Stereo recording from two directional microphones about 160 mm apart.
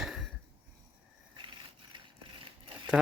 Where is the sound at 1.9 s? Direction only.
30° right (ahead or behind).